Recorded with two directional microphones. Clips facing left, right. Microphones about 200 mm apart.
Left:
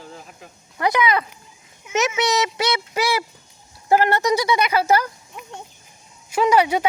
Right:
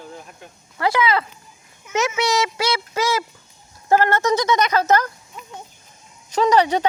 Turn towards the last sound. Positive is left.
turn(degrees=10)  # may be behind; listen again after turning